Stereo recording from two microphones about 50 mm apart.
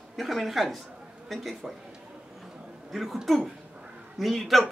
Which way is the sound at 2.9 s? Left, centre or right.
Centre.